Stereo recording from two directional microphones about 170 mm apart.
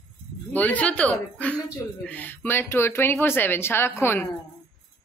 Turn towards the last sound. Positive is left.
turn(degrees=15)  # may be behind; listen again after turning